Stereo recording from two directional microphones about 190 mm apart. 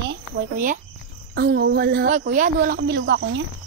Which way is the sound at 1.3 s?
60° right (ahead or behind).